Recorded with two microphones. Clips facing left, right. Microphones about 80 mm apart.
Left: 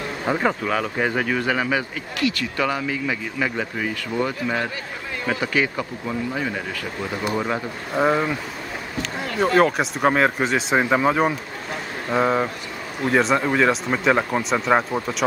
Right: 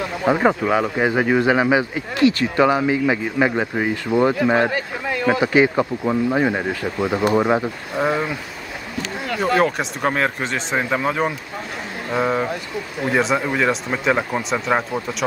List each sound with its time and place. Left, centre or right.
0.3 s speech: centre
4.5 s a man's voice: right
5.4 s speech: right
6.0 s speech: right
7.9 s speech: centre
9.4 s speech: centre